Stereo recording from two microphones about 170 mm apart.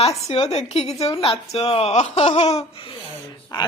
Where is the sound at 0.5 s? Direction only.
40° left (ahead or behind).